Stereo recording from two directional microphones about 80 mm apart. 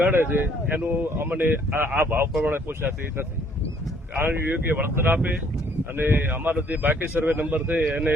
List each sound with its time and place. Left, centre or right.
0.0 s speech: right
4.3 s speech: right